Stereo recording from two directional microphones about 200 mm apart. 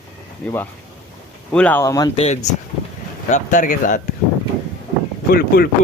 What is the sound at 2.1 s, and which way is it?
Speech, 30° left (ahead or behind).